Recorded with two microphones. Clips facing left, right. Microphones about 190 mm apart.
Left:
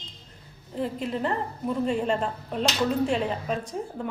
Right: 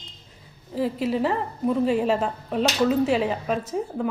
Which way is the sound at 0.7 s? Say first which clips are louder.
Right 5 dB; 5° right (ahead or behind).